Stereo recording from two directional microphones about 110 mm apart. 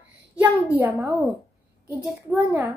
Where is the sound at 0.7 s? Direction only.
20° right (ahead or behind).